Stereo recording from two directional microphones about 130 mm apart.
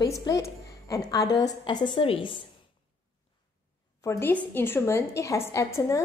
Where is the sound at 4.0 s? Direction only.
25° left (ahead or behind).